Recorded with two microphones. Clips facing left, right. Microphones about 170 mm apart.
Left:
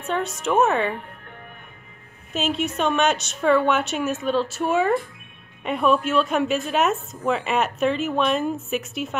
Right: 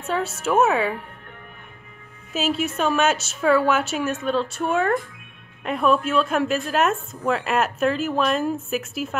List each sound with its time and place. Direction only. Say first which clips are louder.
0.0 s a woman's voice: even; 5° right (ahead or behind)
2.3 s a woman's voice: right 1 dB; 5° right (ahead or behind)